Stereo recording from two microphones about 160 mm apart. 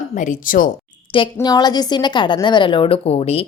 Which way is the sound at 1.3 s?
25° left (ahead or behind).